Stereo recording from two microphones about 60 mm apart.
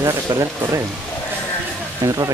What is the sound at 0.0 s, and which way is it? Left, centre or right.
Speech, right.